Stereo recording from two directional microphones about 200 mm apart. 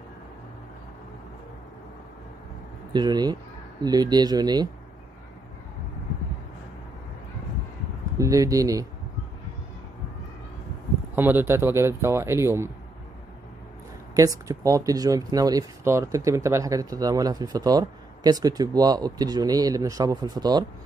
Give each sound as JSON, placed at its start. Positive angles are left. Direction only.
{"t": 2.9, "sound": "speech", "side_deg": -20}
{"t": 8.2, "sound": "speech", "side_deg": -15}
{"t": 11.1, "sound": "speech", "side_deg": -10}
{"t": 14.5, "sound": "speech", "side_deg": -15}